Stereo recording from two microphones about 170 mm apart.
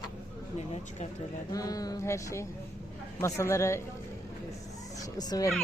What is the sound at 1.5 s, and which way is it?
Speech, 20° left (ahead or behind).